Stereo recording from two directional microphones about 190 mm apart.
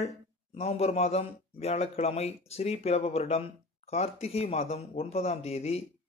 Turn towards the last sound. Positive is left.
turn(degrees=35)  # may be behind; listen again after turning